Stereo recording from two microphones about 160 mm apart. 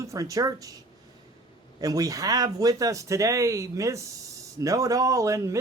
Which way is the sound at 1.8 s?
20° right (ahead or behind).